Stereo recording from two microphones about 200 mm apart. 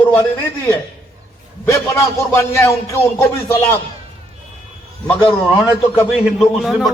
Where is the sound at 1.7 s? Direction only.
15° left (ahead or behind).